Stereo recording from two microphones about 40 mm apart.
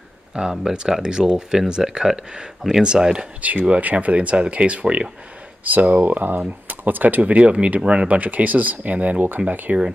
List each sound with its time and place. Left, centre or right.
0.4 s speech: centre
2.8 s speech: right
3.3 s speech: right
5.6 s speech: right